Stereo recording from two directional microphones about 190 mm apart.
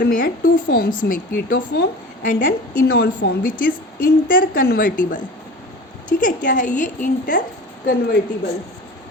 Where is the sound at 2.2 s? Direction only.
45° left (ahead or behind).